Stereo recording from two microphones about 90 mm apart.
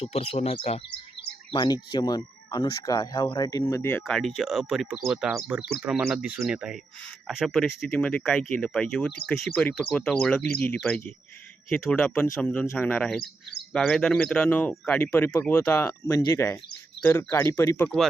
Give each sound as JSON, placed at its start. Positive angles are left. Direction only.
{"t": 0.0, "sound": "speech", "side_deg": 90}
{"t": 1.5, "sound": "speech", "side_deg": 55}
{"t": 4.0, "sound": "speech", "side_deg": 0}
{"t": 9.5, "sound": "speech", "side_deg": 10}
{"t": 17.8, "sound": "speech", "side_deg": 5}